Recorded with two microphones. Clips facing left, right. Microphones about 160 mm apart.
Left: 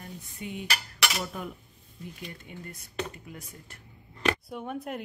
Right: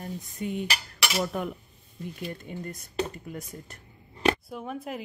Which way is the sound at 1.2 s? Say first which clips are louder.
Right 6 dB; 60° right (ahead or behind).